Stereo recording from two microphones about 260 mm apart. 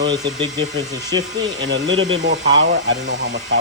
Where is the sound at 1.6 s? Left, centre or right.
Right.